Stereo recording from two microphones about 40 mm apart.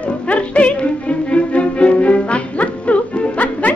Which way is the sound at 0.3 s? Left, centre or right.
Left.